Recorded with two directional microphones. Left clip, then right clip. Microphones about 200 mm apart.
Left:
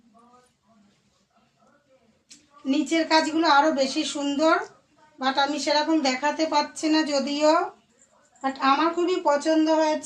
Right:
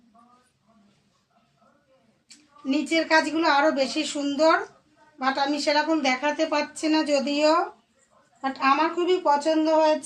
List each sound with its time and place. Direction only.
2.6 s a woman's voice: 15° right (ahead or behind)